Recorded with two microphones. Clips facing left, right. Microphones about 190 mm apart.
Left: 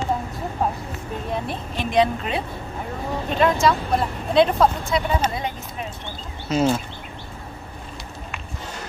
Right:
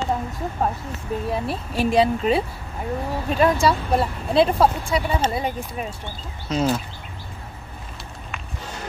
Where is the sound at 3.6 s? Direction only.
5° right (ahead or behind).